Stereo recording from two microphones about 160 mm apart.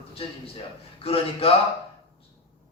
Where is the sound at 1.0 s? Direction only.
35° left (ahead or behind).